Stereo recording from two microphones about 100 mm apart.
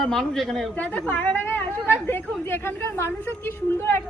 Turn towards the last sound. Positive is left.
turn(degrees=20)  # may be behind; listen again after turning